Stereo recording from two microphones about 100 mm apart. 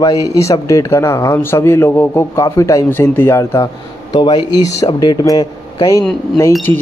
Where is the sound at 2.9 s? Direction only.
20° left (ahead or behind).